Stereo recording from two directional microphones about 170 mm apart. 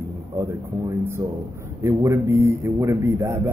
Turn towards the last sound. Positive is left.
turn(degrees=-15)  # may be behind; listen again after turning